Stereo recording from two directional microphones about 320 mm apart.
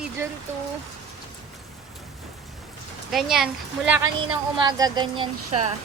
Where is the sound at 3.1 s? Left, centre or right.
Centre.